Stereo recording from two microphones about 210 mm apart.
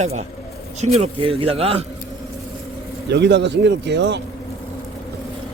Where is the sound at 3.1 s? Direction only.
55° right (ahead or behind).